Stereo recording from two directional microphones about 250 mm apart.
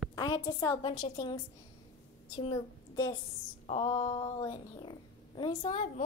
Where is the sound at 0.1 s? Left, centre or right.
Centre.